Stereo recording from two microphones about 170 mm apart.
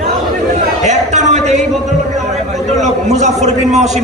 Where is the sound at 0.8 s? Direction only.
45° right (ahead or behind).